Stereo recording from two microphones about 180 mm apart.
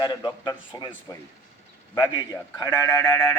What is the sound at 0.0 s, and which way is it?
Speech, 20° left (ahead or behind).